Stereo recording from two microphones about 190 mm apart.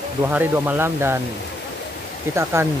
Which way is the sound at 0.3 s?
10° right (ahead or behind).